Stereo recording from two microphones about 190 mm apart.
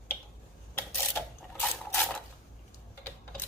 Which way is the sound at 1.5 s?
10° left (ahead or behind).